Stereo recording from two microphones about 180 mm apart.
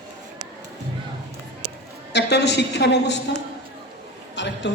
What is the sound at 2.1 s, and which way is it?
A woman's voice, 70° left (ahead or behind).